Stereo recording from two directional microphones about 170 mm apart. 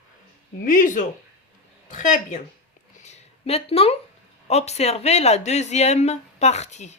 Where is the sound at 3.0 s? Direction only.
40° left (ahead or behind).